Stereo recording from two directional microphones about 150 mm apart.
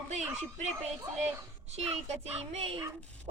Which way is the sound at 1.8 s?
45° right (ahead or behind).